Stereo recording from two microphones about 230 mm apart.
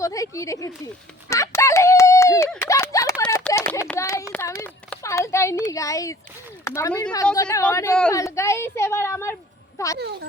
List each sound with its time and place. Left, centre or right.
0.0 s speech: centre
1.3 s a sound: centre
5.7 s speech: centre
10.0 s speech: right